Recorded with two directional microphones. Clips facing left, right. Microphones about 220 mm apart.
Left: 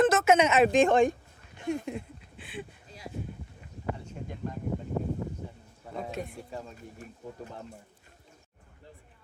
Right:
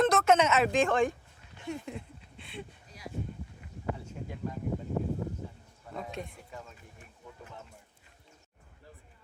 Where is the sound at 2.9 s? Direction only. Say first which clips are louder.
Left 1 dB; 25° left (ahead or behind).